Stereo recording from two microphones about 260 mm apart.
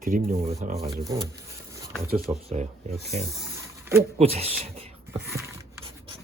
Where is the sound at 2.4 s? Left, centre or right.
Right.